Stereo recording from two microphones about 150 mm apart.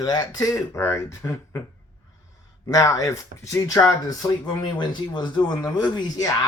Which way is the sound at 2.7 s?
20° left (ahead or behind).